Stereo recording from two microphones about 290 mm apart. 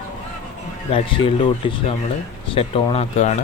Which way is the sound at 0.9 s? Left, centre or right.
Centre.